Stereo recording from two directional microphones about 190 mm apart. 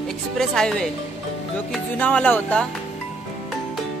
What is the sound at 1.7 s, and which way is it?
Speech, 5° left (ahead or behind).